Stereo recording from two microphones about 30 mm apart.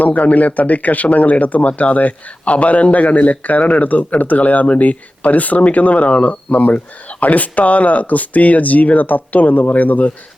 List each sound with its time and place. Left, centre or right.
0.0 s speech: left